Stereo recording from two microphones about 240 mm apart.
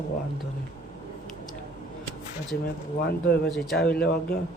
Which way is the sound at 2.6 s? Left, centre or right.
Left.